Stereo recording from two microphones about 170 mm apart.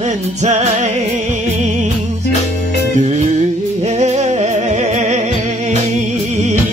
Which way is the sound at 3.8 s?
40° right (ahead or behind).